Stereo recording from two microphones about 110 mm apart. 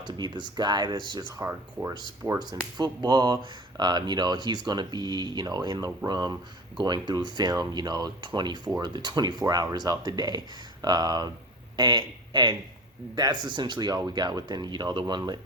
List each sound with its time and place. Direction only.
0.0 s speech: 45° right (ahead or behind)
1.4 s speech: 25° right (ahead or behind); by 15.2 s 40° right (ahead or behind)